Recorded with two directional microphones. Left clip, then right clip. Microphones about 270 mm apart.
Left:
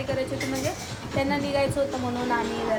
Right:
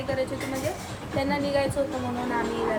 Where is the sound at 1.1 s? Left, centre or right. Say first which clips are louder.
Even; centre.